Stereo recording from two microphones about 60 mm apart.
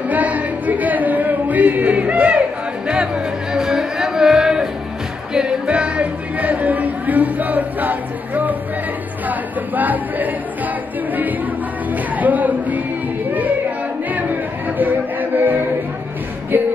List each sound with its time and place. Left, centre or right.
0.1 s music: right
3.5 s a sound: centre
5.3 s music: centre
9.3 s a sound: right
12.2 s music: right
14.8 s music: right